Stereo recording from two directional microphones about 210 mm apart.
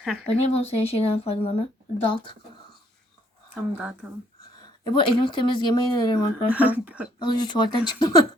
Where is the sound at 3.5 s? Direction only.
5° right (ahead or behind).